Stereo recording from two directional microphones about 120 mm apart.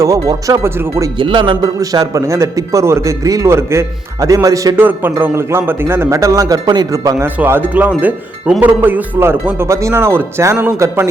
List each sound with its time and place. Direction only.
0.0 s speech: 25° right (ahead or behind)
1.2 s speech: 45° right (ahead or behind)
1.8 s speech: 30° right (ahead or behind)
4.8 s speech: 15° right (ahead or behind)
7.3 s speech: 15° right (ahead or behind)